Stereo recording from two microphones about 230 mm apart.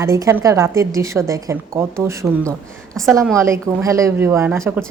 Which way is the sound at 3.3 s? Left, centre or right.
Centre.